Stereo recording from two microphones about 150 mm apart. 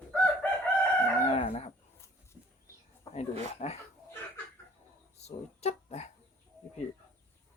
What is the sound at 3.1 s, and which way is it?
Speech, 45° left (ahead or behind).